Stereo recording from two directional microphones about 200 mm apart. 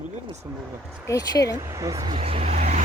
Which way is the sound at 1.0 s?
15° left (ahead or behind).